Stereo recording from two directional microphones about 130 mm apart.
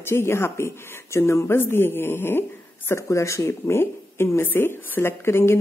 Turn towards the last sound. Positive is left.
turn(degrees=20)  # may be behind; listen again after turning